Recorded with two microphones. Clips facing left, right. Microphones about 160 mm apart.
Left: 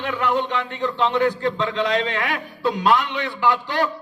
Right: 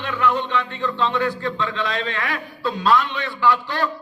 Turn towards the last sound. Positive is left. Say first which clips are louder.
# even
turn(degrees=20)  # may be behind; listen again after turning